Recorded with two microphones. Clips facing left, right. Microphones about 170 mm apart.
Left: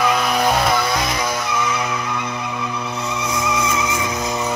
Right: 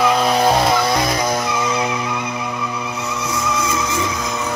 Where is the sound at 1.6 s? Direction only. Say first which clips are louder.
Right 2 dB; 30° right (ahead or behind).